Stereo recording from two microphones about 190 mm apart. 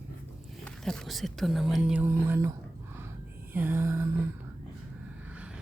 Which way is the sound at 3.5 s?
10° right (ahead or behind).